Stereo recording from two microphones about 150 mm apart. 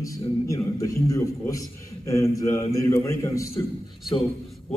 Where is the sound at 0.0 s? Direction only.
20° left (ahead or behind).